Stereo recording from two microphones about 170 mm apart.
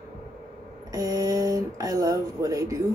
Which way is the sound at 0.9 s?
20° right (ahead or behind).